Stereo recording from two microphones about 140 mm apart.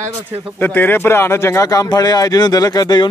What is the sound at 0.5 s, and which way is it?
Speech, 15° left (ahead or behind).